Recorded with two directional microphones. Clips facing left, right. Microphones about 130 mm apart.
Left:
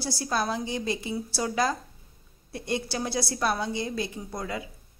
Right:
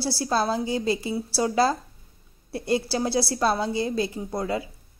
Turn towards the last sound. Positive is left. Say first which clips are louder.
# right 6 dB
turn(degrees=-30)  # may be behind; listen again after turning